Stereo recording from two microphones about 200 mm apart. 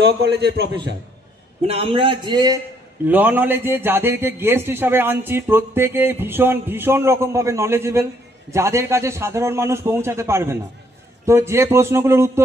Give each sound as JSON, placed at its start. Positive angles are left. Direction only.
{"t": 0.0, "sound": "a man's voice", "side_deg": -55}
{"t": 1.7, "sound": "a man's voice", "side_deg": -30}
{"t": 3.1, "sound": "a man's voice", "side_deg": -10}